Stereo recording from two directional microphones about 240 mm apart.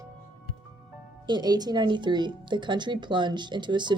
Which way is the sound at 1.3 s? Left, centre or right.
Centre.